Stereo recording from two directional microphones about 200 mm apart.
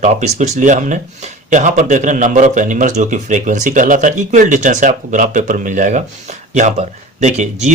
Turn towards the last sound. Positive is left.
turn(degrees=-35)  # may be behind; listen again after turning